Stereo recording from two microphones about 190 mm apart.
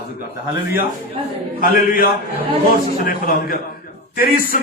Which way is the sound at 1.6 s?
50° left (ahead or behind).